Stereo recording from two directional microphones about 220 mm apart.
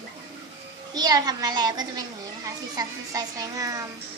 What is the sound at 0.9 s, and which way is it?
A child's voice, 20° right (ahead or behind).